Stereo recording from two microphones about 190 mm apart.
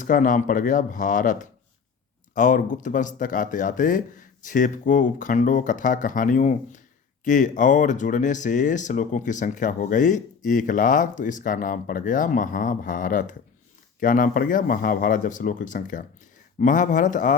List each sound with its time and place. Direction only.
0.0 s speech: 45° left (ahead or behind)